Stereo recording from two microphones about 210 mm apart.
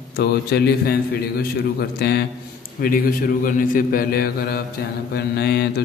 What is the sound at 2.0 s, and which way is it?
Mantra, 50° left (ahead or behind).